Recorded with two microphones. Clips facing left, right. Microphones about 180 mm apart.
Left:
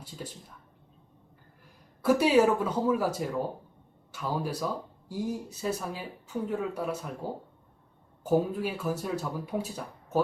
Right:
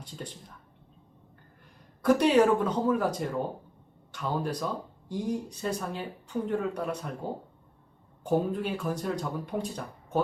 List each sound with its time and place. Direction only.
2.0 s speech: 5° left (ahead or behind)